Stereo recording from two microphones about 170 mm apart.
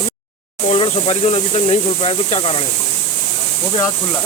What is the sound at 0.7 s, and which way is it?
Speech, 35° left (ahead or behind).